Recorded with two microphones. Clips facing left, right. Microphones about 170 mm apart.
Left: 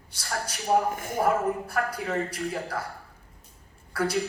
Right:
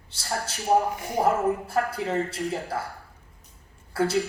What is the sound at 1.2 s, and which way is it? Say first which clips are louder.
A woman's voice: right 2 dB; 25° right (ahead or behind).